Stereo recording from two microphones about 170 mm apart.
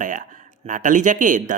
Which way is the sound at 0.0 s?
50° right (ahead or behind).